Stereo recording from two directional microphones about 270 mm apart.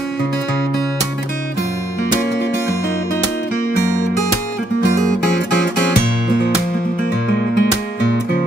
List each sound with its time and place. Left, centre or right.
7.2 s music: left